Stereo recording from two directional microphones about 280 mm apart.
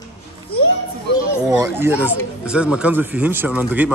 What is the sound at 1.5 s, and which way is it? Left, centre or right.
Speech, centre.